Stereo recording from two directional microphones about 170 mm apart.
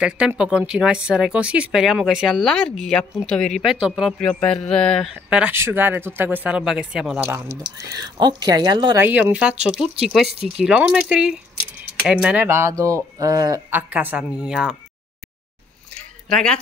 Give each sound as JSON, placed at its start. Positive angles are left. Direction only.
{"t": 0.0, "sound": "speech", "side_deg": -5}
{"t": 4.2, "sound": "speech", "side_deg": 5}
{"t": 5.1, "sound": "speech", "side_deg": -5}
{"t": 7.2, "sound": "speech", "side_deg": -15}
{"t": 9.0, "sound": "speech", "side_deg": -10}
{"t": 13.7, "sound": "speech", "side_deg": -10}
{"t": 16.3, "sound": "speech", "side_deg": 5}